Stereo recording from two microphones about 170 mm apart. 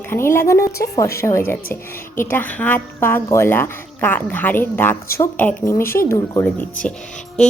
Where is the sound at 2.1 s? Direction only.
10° left (ahead or behind).